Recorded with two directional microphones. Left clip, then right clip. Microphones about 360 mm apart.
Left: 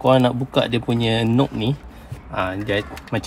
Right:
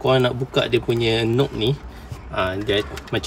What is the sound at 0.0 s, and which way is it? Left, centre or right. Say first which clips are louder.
A man's voice: left 2 dB; centre.